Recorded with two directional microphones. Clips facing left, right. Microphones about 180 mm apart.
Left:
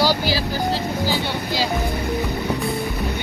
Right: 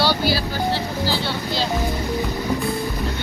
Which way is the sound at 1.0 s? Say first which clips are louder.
Left 1 dB; 15° left (ahead or behind).